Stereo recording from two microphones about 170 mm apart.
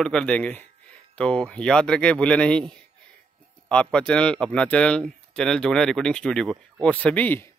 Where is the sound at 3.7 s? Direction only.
5° left (ahead or behind).